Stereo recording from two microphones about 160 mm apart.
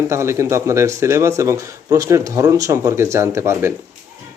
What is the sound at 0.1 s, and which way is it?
A man's voice, 15° right (ahead or behind).